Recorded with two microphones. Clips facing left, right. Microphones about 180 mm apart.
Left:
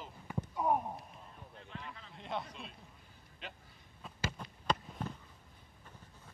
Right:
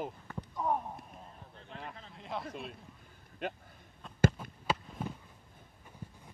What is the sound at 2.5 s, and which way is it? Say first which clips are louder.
A man's voice: right 7 dB; 55° right (ahead or behind).